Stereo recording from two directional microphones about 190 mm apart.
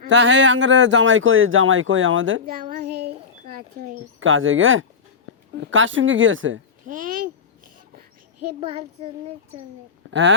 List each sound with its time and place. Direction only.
0.1 s speech: 75° right (ahead or behind); by 2.4 s 90° right
2.5 s speech: 50° right (ahead or behind)
4.2 s a woman's voice: 90° right
6.8 s babbling: 45° right (ahead or behind)
8.6 s a child's voice: 30° right (ahead or behind)
10.1 s speech: 75° right (ahead or behind)